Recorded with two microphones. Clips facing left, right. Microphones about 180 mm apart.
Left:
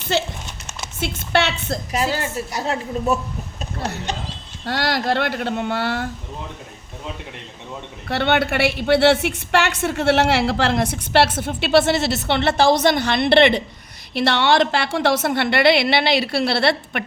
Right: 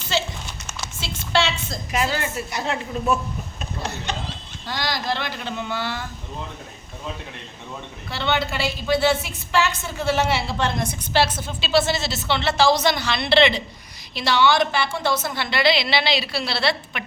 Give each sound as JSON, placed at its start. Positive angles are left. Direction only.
{"t": 0.1, "sound": "a woman's voice", "side_deg": 55}
{"t": 1.9, "sound": "a woman's voice", "side_deg": 35}
{"t": 4.6, "sound": "a woman's voice", "side_deg": 65}
{"t": 8.0, "sound": "a woman's voice", "side_deg": 70}